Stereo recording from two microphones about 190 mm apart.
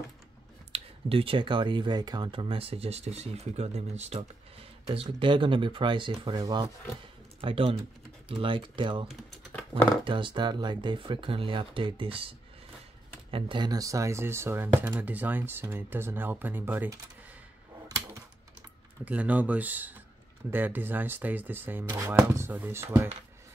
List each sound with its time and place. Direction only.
0.7 s speech: 30° right (ahead or behind)
10.0 s speech: 25° right (ahead or behind); by 16.9 s 10° right (ahead or behind)
19.0 s speech: 10° right (ahead or behind)